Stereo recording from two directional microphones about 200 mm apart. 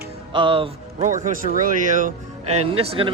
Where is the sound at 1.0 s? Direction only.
40° right (ahead or behind).